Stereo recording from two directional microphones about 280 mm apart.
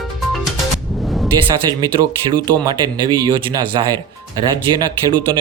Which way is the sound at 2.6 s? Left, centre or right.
Centre.